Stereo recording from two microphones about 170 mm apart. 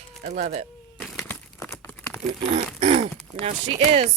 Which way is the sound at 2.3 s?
40° right (ahead or behind).